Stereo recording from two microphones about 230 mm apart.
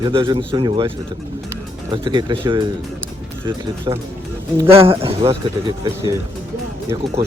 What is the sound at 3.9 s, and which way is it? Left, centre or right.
Speech, centre.